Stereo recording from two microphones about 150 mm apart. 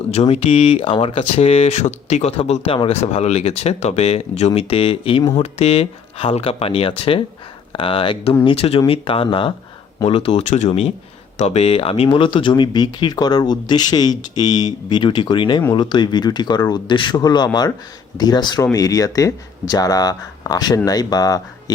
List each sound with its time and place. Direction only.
0.1 s speech: 45° left (ahead or behind); by 21.4 s 25° left (ahead or behind)